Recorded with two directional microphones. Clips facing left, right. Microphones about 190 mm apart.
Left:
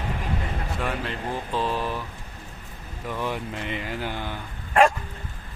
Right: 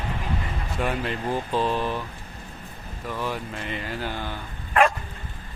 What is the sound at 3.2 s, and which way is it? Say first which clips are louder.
Speech: left 2 dB; 20° left (ahead or behind).